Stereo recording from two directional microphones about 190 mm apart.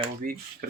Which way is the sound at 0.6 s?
55° right (ahead or behind).